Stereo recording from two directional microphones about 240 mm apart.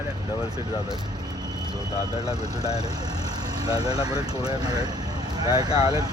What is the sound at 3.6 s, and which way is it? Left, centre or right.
Speech, centre.